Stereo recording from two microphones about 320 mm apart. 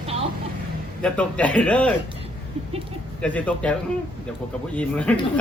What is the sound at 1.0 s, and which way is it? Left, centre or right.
Speech, centre.